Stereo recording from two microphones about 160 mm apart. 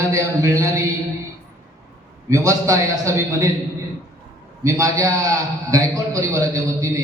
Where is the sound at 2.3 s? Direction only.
20° right (ahead or behind).